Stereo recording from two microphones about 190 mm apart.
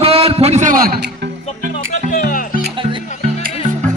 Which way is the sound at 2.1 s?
45° left (ahead or behind).